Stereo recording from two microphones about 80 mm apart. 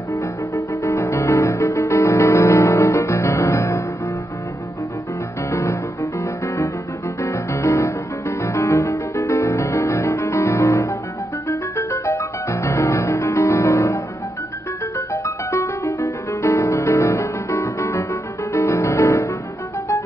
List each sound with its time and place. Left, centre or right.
0.1 s music: left
5.5 s music: left